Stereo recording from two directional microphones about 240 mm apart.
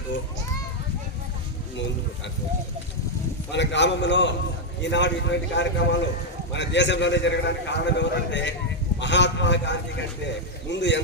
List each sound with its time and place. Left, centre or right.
3.5 s a man's voice: left